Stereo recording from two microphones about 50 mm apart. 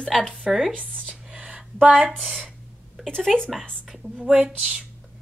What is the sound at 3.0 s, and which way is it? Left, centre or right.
Speech, centre.